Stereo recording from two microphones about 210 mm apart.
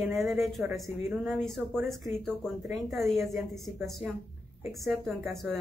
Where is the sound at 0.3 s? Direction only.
Centre (ahead or behind).